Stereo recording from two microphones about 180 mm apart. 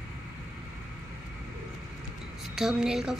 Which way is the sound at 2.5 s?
5° right (ahead or behind).